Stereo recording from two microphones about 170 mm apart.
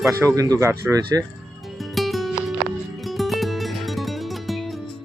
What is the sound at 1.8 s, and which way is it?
Music, centre (ahead or behind).